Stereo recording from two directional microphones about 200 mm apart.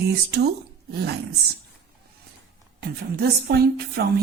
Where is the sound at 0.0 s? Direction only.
55° right (ahead or behind).